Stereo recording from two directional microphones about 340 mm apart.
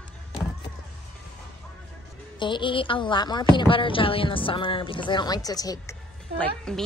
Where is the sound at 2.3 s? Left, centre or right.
Centre.